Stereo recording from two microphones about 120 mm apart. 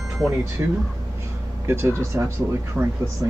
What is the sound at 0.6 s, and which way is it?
Speech, 20° right (ahead or behind).